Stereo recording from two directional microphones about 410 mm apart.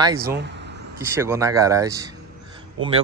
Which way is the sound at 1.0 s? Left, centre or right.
Centre.